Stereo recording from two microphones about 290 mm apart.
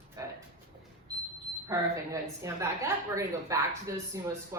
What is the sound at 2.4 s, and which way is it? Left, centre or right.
A woman's voice, centre.